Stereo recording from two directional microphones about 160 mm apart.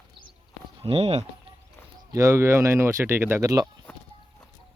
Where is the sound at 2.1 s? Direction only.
20° right (ahead or behind).